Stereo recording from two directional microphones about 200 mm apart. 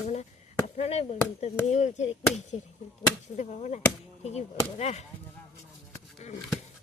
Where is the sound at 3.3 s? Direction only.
35° left (ahead or behind).